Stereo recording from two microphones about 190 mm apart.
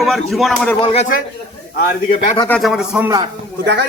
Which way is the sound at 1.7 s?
50° left (ahead or behind).